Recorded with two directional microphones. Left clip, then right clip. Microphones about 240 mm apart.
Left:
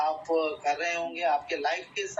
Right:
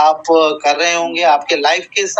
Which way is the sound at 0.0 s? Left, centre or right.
Right.